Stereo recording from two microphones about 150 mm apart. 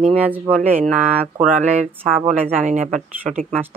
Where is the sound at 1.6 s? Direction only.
50° right (ahead or behind).